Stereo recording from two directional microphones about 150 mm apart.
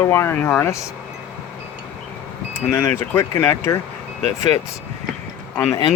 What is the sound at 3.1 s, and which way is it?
Speech, 15° left (ahead or behind).